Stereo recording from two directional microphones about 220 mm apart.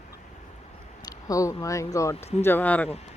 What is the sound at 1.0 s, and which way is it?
Speech, 15° left (ahead or behind).